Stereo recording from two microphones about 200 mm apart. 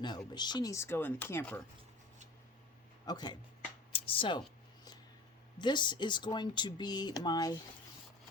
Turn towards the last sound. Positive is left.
turn(degrees=20)  # may be behind; listen again after turning